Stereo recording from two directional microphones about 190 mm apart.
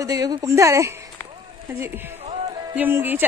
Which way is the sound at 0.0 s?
20° right (ahead or behind).